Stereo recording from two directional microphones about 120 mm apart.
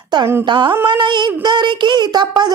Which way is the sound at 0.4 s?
40° right (ahead or behind).